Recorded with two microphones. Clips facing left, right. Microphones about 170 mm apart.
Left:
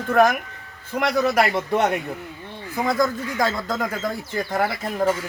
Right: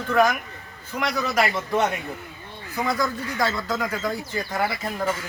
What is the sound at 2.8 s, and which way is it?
Speech, 50° left (ahead or behind).